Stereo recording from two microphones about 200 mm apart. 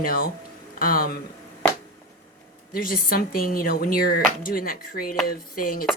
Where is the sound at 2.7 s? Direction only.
45° left (ahead or behind).